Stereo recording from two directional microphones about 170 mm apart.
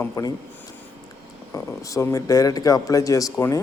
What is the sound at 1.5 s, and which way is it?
A man's voice, 20° left (ahead or behind).